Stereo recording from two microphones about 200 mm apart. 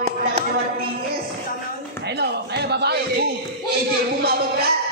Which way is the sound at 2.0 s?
55° right (ahead or behind).